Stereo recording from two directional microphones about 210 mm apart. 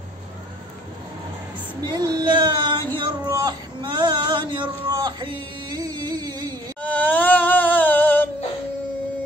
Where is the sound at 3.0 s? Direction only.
20° right (ahead or behind).